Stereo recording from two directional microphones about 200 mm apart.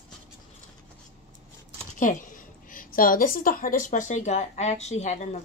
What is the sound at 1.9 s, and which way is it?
A woman's voice, 40° left (ahead or behind).